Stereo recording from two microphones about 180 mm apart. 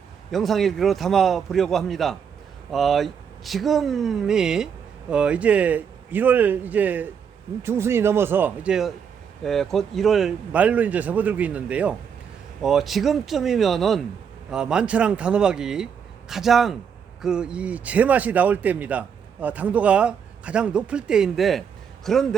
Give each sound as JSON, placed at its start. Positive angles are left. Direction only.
{"t": 0.3, "sound": "a man's voice", "side_deg": 0}